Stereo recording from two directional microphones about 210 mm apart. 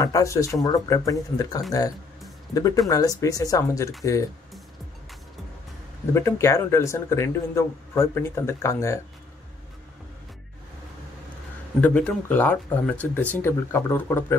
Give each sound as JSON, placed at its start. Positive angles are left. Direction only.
{"t": 0.0, "sound": "a man's voice", "side_deg": 15}
{"t": 6.1, "sound": "a man's voice", "side_deg": 15}
{"t": 11.8, "sound": "a man's voice", "side_deg": 5}